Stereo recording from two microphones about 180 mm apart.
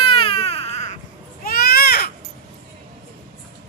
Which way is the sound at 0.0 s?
30° left (ahead or behind).